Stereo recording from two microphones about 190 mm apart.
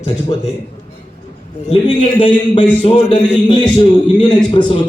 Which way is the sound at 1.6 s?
30° left (ahead or behind).